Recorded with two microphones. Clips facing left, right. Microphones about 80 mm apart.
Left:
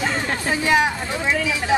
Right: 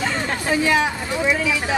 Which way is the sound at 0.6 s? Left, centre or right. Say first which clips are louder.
Left 1 dB; left.